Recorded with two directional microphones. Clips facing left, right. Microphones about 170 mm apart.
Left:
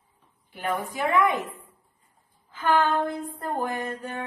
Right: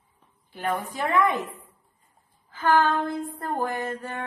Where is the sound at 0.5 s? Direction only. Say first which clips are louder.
Even; 15° left (ahead or behind).